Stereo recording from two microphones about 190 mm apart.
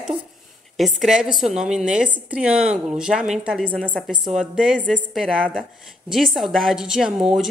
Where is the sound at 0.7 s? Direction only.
Centre (ahead or behind).